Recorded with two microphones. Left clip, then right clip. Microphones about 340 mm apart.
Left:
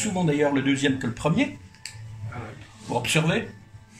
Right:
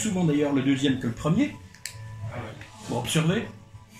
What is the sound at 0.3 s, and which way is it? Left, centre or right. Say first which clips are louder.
A man's voice: left 2 dB; left.